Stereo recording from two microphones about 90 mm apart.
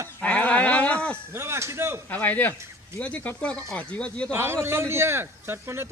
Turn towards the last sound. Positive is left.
turn(degrees=-25)  # may be behind; listen again after turning